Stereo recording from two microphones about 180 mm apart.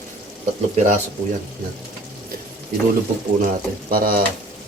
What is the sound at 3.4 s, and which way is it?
Speech, 50° right (ahead or behind).